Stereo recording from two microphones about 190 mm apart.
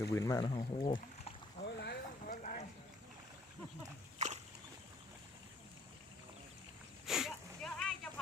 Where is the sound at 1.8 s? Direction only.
60° left (ahead or behind).